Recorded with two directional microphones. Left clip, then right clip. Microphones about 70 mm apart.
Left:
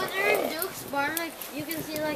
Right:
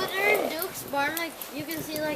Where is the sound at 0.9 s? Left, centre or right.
Right.